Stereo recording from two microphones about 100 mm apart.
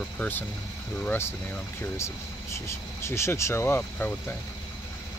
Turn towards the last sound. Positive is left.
turn(degrees=20)  # may be behind; listen again after turning